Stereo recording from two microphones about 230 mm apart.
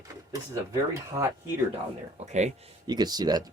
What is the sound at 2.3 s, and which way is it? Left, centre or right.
Speech, right.